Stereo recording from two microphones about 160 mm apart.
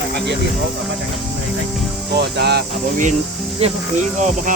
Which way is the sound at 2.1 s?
90° right.